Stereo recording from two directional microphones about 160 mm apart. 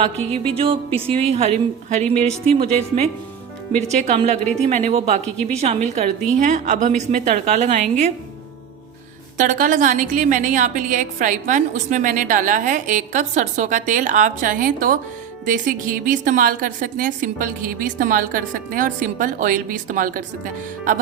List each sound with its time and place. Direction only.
0.3 s a woman's voice: 35° right (ahead or behind)
9.4 s a woman's voice: 55° right (ahead or behind)